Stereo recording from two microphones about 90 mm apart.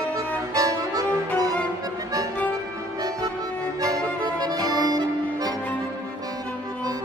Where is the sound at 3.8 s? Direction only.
45° right (ahead or behind).